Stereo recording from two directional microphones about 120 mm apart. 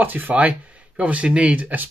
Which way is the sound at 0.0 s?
15° right (ahead or behind).